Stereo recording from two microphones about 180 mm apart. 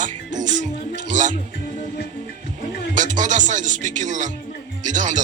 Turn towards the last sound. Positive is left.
turn(degrees=-45)  # may be behind; listen again after turning